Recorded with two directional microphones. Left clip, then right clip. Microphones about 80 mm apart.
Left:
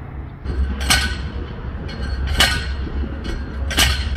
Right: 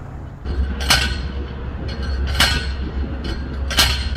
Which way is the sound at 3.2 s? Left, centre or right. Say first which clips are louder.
Right 1 dB; right.